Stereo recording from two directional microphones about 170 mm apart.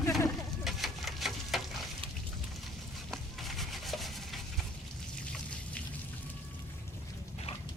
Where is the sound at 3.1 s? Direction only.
Centre (ahead or behind).